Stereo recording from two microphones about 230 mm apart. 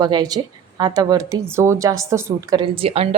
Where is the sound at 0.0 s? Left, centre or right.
Centre.